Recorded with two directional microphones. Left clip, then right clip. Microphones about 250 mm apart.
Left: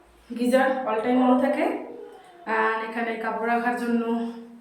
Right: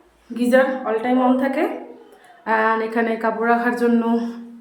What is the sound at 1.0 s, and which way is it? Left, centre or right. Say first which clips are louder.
A woman's voice: right 2 dB; centre.